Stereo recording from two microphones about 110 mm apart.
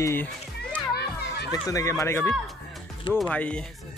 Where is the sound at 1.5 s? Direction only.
30° left (ahead or behind).